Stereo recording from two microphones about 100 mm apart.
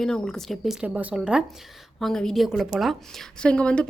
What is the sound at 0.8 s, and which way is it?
Speech, 15° right (ahead or behind).